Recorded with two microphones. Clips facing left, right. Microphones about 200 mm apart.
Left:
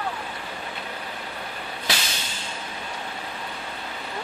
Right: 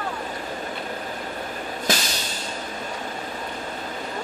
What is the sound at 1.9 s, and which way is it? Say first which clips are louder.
Vehicle: right 5 dB; 45° right (ahead or behind).